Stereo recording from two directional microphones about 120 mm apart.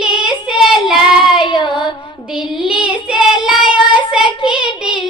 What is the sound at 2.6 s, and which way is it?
Child singing, 5° right (ahead or behind).